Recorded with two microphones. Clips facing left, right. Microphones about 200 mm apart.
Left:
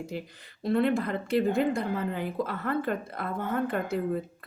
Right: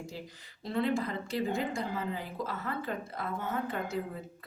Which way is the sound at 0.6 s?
60° left (ahead or behind).